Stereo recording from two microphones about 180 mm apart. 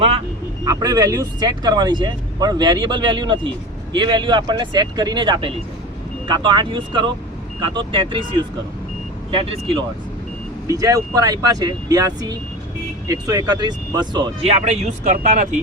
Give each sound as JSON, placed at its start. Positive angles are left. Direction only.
{"t": 0.6, "sound": "speech", "side_deg": -20}
{"t": 9.3, "sound": "speech", "side_deg": -30}
{"t": 10.7, "sound": "speech", "side_deg": -20}
{"t": 14.4, "sound": "speech", "side_deg": -40}